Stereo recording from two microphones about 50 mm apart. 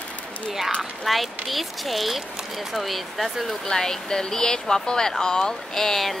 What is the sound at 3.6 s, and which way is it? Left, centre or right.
Speech, centre.